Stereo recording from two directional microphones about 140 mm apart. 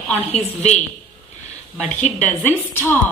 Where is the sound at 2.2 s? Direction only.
15° left (ahead or behind).